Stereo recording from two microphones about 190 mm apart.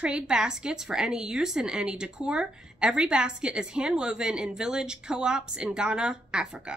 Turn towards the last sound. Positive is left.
turn(degrees=-5)  # may be behind; listen again after turning